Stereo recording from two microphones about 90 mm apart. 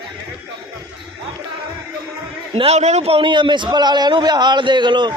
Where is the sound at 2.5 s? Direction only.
90° right; by 5.1 s 60° right (ahead or behind).